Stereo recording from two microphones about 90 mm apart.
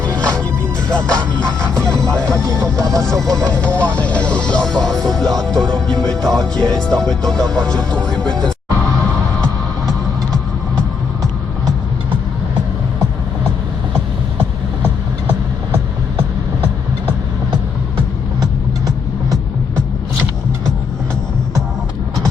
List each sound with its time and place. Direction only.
0.1 s music: 35° right (ahead or behind)
0.9 s music: 10° left (ahead or behind)
1.8 s music: 35° right (ahead or behind)
2.3 s speech: 35° right (ahead or behind)
3.5 s speech: 15° left (ahead or behind)
6.3 s music: 5° left (ahead or behind)
6.7 s speech: 10° left (ahead or behind)